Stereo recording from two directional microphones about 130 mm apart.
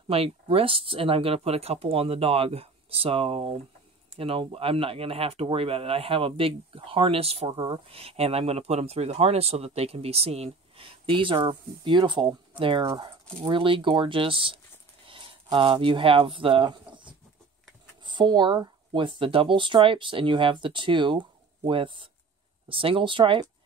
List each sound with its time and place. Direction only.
0.1 s speech: 50° right (ahead or behind)
12.8 s speech: 30° right (ahead or behind)